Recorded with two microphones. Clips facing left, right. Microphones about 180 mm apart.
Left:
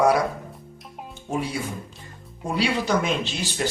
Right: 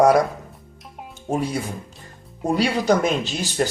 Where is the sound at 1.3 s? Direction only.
45° right (ahead or behind).